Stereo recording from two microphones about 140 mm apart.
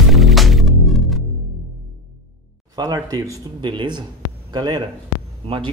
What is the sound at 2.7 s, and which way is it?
A man's voice, 25° right (ahead or behind).